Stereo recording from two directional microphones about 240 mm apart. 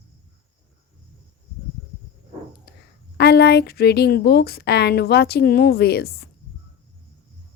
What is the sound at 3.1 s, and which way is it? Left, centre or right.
A woman's voice, left.